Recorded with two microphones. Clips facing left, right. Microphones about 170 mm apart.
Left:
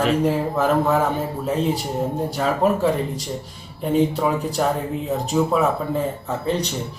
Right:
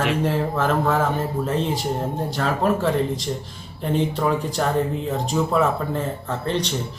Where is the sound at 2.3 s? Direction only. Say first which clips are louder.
Left 1 dB; 10° left (ahead or behind).